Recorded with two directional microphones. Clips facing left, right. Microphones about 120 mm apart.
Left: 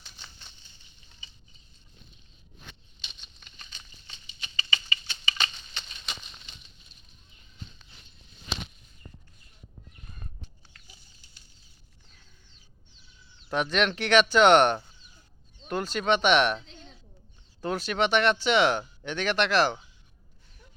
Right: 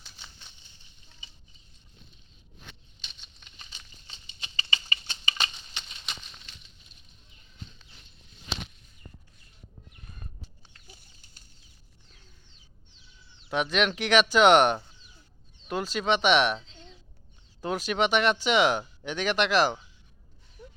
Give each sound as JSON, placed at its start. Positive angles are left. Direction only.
{"t": 0.0, "sound": "bird flight", "side_deg": -5}
{"t": 3.0, "sound": "a sound", "side_deg": 0}
{"t": 4.0, "sound": "patter", "side_deg": -25}
{"t": 4.9, "sound": "typewriter", "side_deg": -40}
{"t": 13.5, "sound": "speech", "side_deg": 0}
{"t": 17.6, "sound": "speech", "side_deg": -10}